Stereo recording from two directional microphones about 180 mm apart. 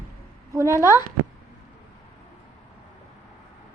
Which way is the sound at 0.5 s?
15° right (ahead or behind).